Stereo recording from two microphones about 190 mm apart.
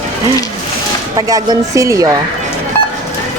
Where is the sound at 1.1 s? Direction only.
20° right (ahead or behind).